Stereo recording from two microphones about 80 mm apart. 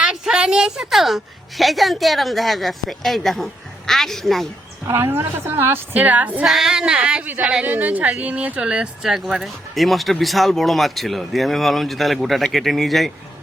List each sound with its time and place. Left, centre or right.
0.0 s a woman's voice: centre
4.9 s a woman's voice: right
5.9 s a woman's voice: centre
6.4 s a woman's voice: centre